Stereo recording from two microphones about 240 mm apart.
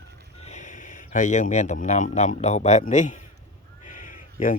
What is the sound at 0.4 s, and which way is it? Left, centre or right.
Speech, left.